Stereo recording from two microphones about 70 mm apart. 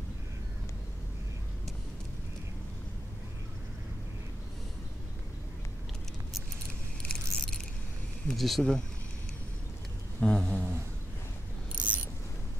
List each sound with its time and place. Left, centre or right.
7.1 s keys jangling: centre
8.4 s speech: centre
10.2 s a sound: centre
11.7 s mechanisms: centre